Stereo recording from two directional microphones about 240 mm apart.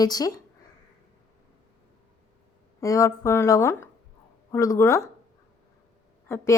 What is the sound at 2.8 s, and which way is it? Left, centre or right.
A woman's voice, centre.